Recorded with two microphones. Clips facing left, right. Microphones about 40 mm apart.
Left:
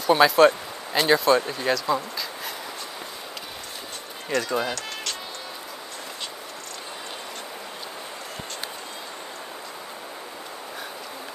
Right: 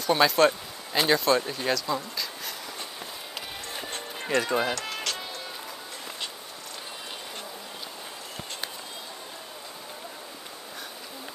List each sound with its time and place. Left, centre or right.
0.0 s speech: centre
4.3 s speech: centre